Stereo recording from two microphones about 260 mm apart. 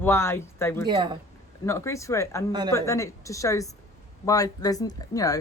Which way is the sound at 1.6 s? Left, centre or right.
Centre.